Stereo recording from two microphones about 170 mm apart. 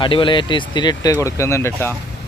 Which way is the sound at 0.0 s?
30° left (ahead or behind).